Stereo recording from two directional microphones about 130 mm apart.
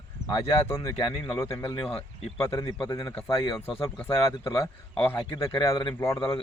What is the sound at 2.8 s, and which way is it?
Speech, 30° left (ahead or behind).